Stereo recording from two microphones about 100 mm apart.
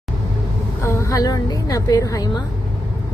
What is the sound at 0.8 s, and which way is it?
A woman's voice, 30° left (ahead or behind).